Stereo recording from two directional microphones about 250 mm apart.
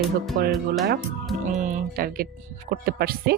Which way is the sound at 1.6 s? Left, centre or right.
Right.